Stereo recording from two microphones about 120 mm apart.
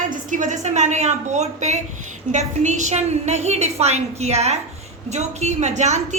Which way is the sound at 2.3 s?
85° right.